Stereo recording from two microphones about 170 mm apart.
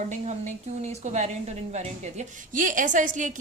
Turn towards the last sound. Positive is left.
turn(degrees=-50)  # may be behind; listen again after turning